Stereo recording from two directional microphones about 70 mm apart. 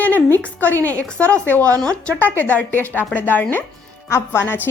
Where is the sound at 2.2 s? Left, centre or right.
Left.